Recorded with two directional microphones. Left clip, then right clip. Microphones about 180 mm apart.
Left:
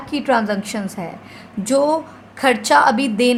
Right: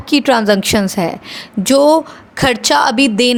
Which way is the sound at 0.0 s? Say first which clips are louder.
Right 6 dB; 50° right (ahead or behind).